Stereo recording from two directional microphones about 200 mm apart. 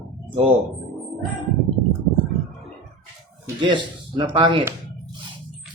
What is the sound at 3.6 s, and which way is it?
Speech, 25° right (ahead or behind).